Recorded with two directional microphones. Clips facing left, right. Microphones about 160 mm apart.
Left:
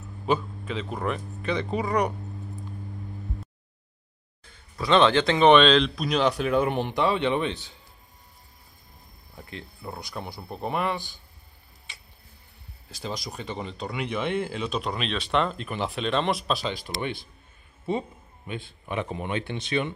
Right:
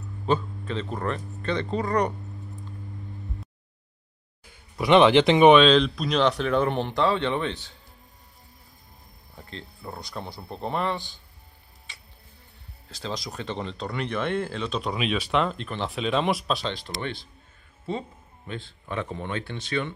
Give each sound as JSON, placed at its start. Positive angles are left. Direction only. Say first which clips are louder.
{"t": 0.3, "sound": "speech", "louder": "right 1 dB", "side_deg": 5}
{"t": 4.7, "sound": "speech", "louder": "right 3 dB", "side_deg": -15}
{"t": 5.5, "sound": "speech", "louder": "right 1 dB", "side_deg": 0}
{"t": 9.5, "sound": "speech", "louder": "even", "side_deg": 15}
{"t": 12.9, "sound": "speech", "louder": "right 1 dB", "side_deg": 10}